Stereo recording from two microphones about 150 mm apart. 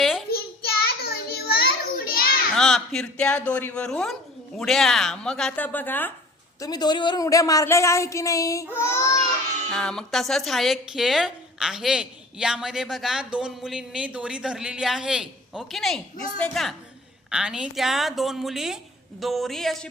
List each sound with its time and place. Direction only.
0.0 s child singing: centre (ahead or behind)
0.3 s a sound: 90° left
2.6 s a woman's voice: centre (ahead or behind)
6.6 s a woman's voice: 25° left (ahead or behind)
9.7 s a woman's voice: 5° left (ahead or behind)